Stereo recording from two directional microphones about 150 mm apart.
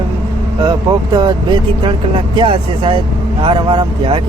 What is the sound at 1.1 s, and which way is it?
Speech, 30° right (ahead or behind).